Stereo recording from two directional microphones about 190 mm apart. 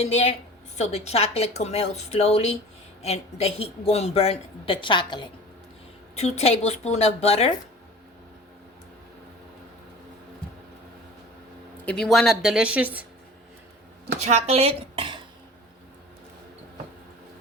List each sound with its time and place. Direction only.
0.0 s speech: 35° left (ahead or behind)
6.1 s speech: 35° left (ahead or behind)
11.9 s speech: centre (ahead or behind)
14.2 s speech: 35° right (ahead or behind)